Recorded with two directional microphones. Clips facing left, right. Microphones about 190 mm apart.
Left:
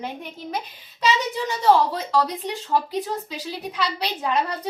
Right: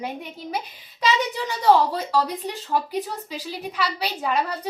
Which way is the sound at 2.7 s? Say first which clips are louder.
Left 2 dB; 5° right (ahead or behind).